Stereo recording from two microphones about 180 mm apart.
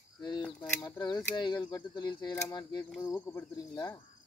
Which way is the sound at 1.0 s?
25° left (ahead or behind).